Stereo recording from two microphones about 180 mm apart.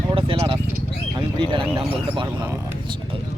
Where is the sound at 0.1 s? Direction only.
30° right (ahead or behind).